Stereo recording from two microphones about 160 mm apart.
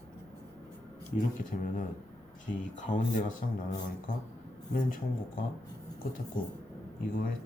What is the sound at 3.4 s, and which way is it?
Speech, 55° left (ahead or behind).